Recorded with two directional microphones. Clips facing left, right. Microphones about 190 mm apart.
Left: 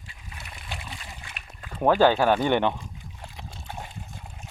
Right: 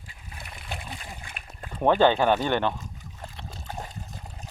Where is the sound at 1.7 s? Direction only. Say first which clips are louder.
Left 1 dB; 5° left (ahead or behind).